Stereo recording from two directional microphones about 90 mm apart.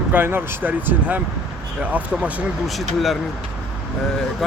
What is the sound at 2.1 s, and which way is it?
Speech, centre (ahead or behind).